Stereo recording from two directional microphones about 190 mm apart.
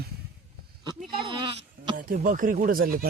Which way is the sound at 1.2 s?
25° right (ahead or behind).